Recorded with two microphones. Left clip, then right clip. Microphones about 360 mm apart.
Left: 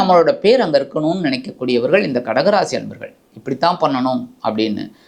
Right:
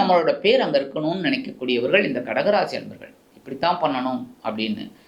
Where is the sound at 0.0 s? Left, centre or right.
Left.